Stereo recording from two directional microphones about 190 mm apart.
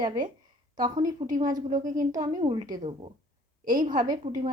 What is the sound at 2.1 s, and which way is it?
Speech, 20° right (ahead or behind).